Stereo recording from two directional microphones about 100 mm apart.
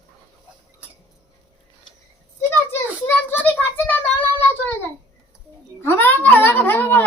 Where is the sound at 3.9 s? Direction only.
20° left (ahead or behind).